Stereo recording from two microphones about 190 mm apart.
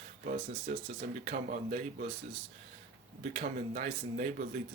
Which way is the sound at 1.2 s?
45° right (ahead or behind).